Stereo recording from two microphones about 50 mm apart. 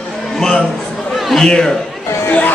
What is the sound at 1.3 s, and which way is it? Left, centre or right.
Speech, centre.